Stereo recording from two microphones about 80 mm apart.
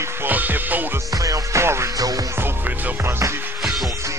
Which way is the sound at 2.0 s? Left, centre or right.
Right.